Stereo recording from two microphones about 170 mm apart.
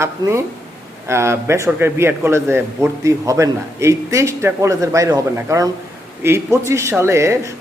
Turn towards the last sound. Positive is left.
turn(degrees=-15)  # may be behind; listen again after turning